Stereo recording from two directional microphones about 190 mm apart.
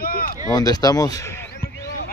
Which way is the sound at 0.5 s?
20° left (ahead or behind).